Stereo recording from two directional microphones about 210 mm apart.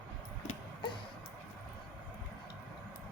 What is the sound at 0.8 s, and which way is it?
Music, 25° left (ahead or behind).